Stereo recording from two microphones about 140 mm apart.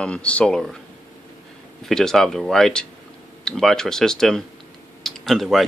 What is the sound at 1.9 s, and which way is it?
Speech, 5° left (ahead or behind).